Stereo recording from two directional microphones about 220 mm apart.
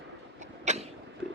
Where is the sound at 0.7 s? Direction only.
30° right (ahead or behind).